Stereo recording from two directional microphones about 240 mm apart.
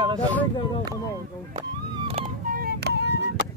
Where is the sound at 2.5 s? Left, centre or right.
Right.